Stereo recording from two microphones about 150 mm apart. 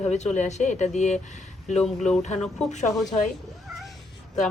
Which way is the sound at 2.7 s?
50° left (ahead or behind).